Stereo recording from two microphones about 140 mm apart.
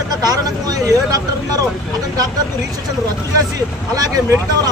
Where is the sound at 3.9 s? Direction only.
25° right (ahead or behind).